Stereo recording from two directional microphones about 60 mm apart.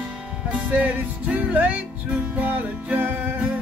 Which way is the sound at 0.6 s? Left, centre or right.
Right.